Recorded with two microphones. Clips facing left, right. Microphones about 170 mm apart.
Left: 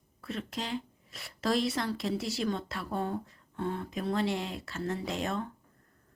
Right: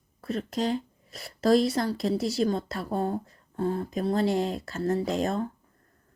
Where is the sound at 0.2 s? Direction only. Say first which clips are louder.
Right 8 dB; 40° right (ahead or behind).